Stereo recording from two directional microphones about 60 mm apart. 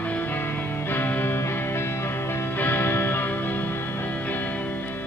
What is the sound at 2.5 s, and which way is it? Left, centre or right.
Music, left.